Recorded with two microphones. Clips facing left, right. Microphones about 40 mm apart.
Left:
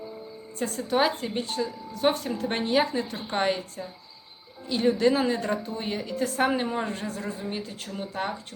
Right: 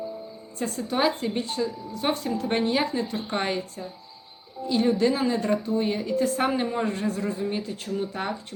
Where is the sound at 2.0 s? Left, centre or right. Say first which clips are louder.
Left 1 dB; centre.